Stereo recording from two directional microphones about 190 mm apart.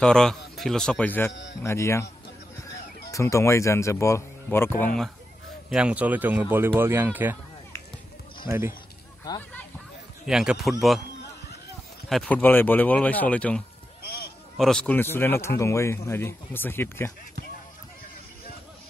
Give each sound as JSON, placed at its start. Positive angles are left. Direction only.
{"t": 0.0, "sound": "a man's voice", "side_deg": 5}
{"t": 1.3, "sound": "speech", "side_deg": 70}
{"t": 1.6, "sound": "speech", "side_deg": 15}
{"t": 3.1, "sound": "speech", "side_deg": 15}
{"t": 5.7, "sound": "speech", "side_deg": -5}
{"t": 8.5, "sound": "speech", "side_deg": -15}
{"t": 10.2, "sound": "a man's voice", "side_deg": -5}
{"t": 12.1, "sound": "speech", "side_deg": 5}
{"t": 14.6, "sound": "speech", "side_deg": 5}